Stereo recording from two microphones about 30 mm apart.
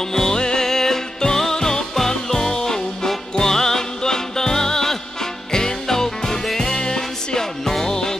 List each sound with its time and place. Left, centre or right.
0.1 s music: centre